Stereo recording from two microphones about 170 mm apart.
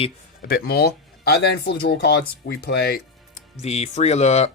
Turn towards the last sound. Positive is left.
turn(degrees=40)  # may be behind; listen again after turning